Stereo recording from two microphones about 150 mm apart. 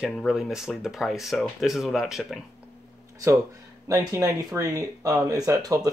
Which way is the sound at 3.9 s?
25° right (ahead or behind).